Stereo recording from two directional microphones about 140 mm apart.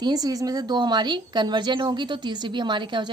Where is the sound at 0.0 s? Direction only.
30° right (ahead or behind).